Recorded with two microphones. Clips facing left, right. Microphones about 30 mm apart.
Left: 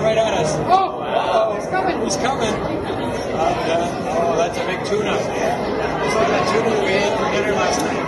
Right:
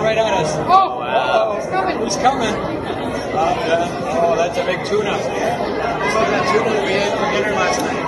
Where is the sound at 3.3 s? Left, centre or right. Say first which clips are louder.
Right 2 dB; right.